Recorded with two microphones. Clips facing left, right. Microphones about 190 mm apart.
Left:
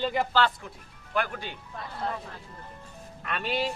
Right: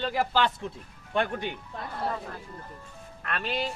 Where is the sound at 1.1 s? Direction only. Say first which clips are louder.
Right 3 dB; 25° right (ahead or behind).